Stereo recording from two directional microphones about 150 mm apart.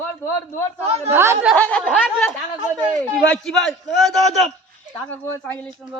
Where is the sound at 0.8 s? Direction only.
45° right (ahead or behind).